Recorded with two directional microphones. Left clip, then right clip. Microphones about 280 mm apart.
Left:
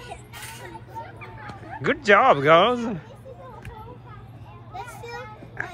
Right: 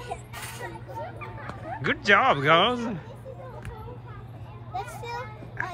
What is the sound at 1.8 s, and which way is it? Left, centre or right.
Speech, centre.